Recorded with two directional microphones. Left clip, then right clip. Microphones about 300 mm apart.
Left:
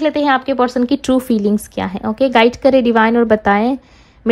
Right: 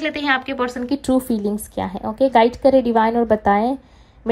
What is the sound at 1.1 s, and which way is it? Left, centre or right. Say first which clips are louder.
Speech: left 2 dB; right.